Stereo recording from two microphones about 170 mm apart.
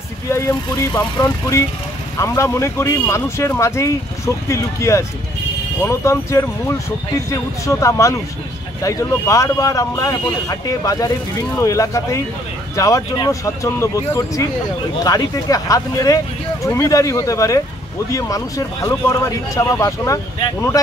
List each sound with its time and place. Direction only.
0.3 s speech: 15° left (ahead or behind)